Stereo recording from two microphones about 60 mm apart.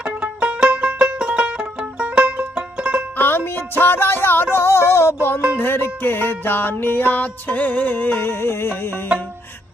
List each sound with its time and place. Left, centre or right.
0.0 s music: centre
3.2 s music: left